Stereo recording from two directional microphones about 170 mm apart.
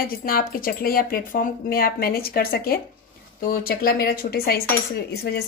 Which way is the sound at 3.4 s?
60° left (ahead or behind).